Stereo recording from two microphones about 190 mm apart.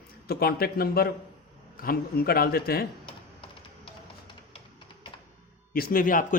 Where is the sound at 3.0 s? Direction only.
25° left (ahead or behind).